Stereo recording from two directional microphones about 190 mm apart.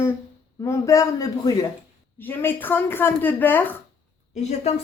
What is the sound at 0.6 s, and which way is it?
Speech, 15° left (ahead or behind).